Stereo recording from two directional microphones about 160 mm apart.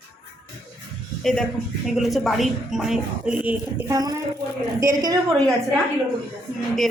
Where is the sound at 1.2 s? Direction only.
5° left (ahead or behind); by 5.2 s 20° right (ahead or behind).